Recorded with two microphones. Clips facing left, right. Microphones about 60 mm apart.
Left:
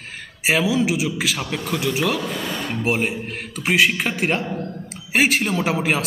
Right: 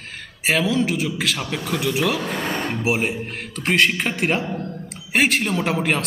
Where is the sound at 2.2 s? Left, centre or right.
Right.